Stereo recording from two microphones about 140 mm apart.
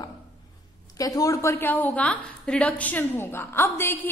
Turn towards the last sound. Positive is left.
turn(degrees=15)  # may be behind; listen again after turning